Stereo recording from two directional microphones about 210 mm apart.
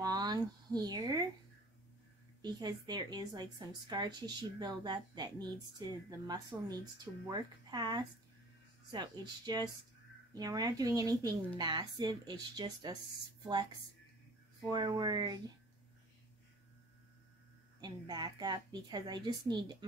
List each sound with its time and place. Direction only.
0.0 s a sound: 20° right (ahead or behind)
2.4 s a woman's voice: 20° right (ahead or behind)
14.7 s a woman's voice: 20° right (ahead or behind)
17.7 s a woman's voice: 20° right (ahead or behind)